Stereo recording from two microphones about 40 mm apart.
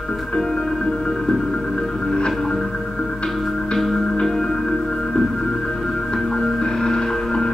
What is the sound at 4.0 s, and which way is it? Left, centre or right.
Music, left.